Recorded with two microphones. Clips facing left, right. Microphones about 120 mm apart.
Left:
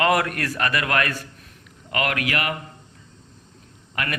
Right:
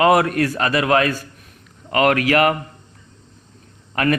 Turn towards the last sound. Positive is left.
turn(degrees=-40)  # may be behind; listen again after turning